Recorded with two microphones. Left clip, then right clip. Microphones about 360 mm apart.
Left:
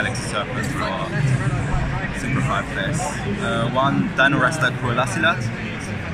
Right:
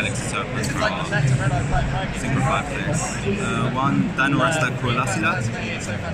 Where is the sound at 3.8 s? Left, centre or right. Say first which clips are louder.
Left 4 dB; centre.